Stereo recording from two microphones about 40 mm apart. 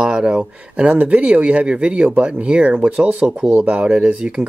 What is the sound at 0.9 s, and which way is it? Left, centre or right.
Speech, right.